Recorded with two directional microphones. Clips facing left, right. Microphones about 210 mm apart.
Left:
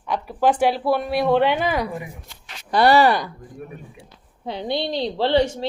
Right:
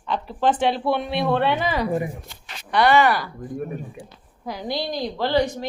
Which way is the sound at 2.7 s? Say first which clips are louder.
Left 2 dB; 35° left (ahead or behind).